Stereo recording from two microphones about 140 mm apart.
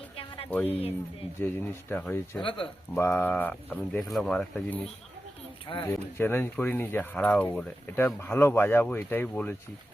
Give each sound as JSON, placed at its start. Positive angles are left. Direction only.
{"t": 0.5, "sound": "speech", "side_deg": 10}
{"t": 2.4, "sound": "speech", "side_deg": 35}
{"t": 2.9, "sound": "speech", "side_deg": 15}
{"t": 5.7, "sound": "speech", "side_deg": 35}
{"t": 6.1, "sound": "speech", "side_deg": 15}